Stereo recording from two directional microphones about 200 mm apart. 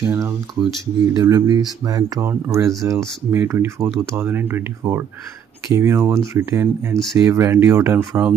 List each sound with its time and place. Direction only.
0.0 s speech: 15° right (ahead or behind)
5.7 s speech: 15° right (ahead or behind)